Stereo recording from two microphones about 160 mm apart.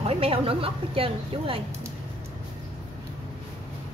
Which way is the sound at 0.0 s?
35° right (ahead or behind).